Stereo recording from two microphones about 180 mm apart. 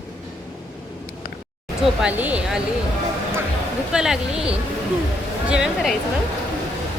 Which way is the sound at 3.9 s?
5° right (ahead or behind).